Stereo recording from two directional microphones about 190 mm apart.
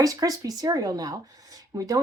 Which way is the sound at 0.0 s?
20° right (ahead or behind).